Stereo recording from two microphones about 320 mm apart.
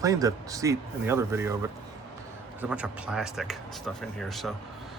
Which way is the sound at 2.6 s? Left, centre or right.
Centre.